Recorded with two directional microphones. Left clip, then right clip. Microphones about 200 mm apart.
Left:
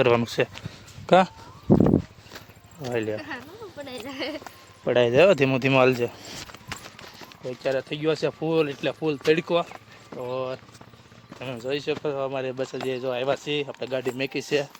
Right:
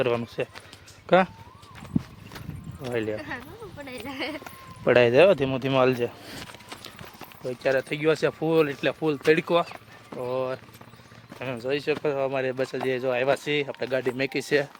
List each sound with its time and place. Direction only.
0.0 s speech: 30° left (ahead or behind)
2.8 s speech: 5° left (ahead or behind)
4.9 s speech: 10° right (ahead or behind)
5.2 s speech: 15° left (ahead or behind); by 14.7 s 5° right (ahead or behind)